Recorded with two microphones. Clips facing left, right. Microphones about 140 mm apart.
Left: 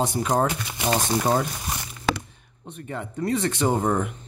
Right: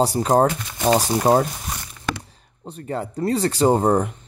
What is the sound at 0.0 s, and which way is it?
Speech, 35° right (ahead or behind).